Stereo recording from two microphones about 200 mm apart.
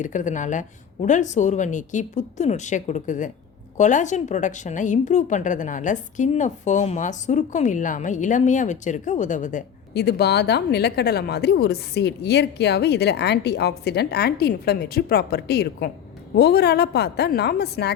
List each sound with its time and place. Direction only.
0.0 s a woman's voice: 40° left (ahead or behind)
9.9 s speech: 55° left (ahead or behind)